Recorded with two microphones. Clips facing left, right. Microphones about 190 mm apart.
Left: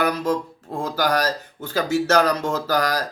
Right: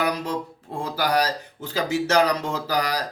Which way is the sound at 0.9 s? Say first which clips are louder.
Left 1 dB; 10° right (ahead or behind).